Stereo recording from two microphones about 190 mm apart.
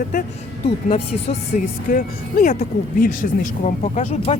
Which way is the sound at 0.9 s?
35° left (ahead or behind).